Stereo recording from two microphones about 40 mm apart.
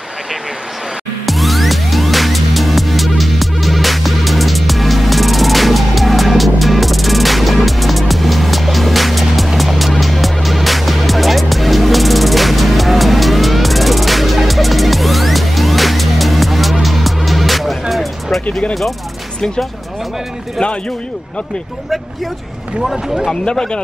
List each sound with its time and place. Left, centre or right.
1.2 s music: centre
23.4 s speech: left